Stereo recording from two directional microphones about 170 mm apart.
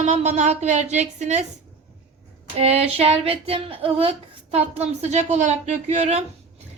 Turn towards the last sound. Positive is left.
turn(degrees=-40)  # may be behind; listen again after turning